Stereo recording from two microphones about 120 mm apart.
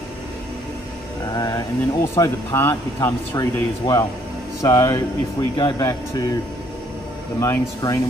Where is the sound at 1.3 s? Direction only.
30° left (ahead or behind).